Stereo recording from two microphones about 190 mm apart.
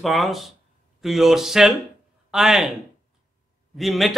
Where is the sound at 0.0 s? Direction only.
Centre (ahead or behind).